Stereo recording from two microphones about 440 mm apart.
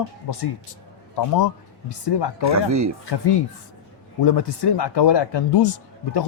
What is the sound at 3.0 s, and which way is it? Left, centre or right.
Speech, left.